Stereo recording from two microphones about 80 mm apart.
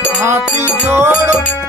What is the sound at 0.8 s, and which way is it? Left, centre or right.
Music, right.